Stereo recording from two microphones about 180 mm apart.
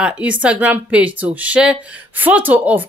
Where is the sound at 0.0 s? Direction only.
5° right (ahead or behind).